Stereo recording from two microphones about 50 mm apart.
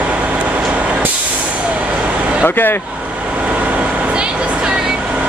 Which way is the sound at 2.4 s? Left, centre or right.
Left.